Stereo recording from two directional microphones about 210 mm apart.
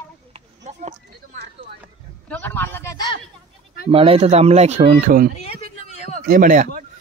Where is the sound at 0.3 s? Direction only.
25° right (ahead or behind).